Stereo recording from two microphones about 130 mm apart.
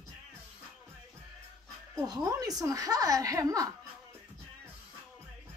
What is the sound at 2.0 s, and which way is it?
A woman's voice, 25° right (ahead or behind).